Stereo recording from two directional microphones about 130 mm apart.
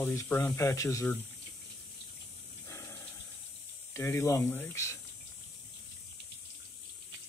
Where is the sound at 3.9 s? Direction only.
20° left (ahead or behind).